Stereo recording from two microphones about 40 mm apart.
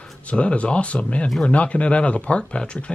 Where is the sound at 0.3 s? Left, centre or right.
Left.